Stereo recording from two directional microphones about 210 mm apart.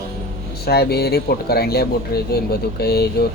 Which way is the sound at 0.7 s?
50° left (ahead or behind).